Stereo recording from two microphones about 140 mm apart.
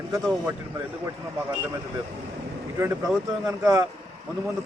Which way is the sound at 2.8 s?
20° right (ahead or behind).